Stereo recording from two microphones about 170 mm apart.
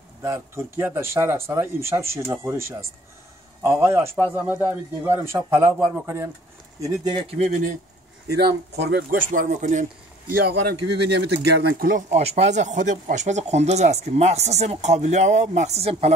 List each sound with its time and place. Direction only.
0.2 s speech: 15° right (ahead or behind)
6.8 s speech: 30° right (ahead or behind); by 7.7 s 45° right (ahead or behind)
8.3 s speech: 25° right (ahead or behind)
8.7 s speech: 65° right (ahead or behind); by 9.8 s 45° right (ahead or behind)
10.3 s speech: 70° right (ahead or behind)
12.1 s speech: 40° right (ahead or behind)